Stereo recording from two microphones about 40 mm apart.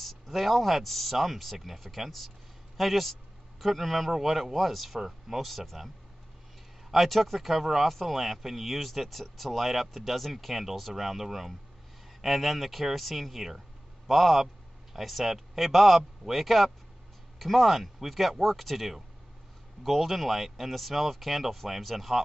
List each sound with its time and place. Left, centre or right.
0.0 s speech: centre
6.9 s a man's voice: centre